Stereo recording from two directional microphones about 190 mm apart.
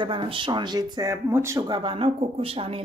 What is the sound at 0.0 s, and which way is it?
Speech, 25° right (ahead or behind).